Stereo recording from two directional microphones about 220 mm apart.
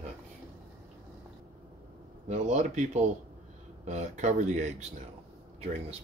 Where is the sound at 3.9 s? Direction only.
30° right (ahead or behind).